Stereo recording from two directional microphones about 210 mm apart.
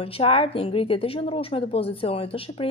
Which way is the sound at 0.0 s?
25° left (ahead or behind).